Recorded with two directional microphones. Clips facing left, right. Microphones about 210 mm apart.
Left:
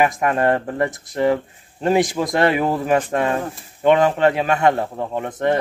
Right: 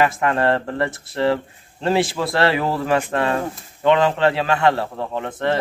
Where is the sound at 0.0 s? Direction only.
15° left (ahead or behind).